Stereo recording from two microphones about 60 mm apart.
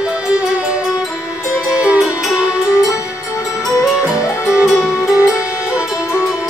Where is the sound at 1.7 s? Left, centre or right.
Right.